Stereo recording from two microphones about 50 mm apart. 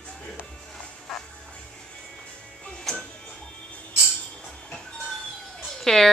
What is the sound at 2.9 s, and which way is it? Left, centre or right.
Music, centre.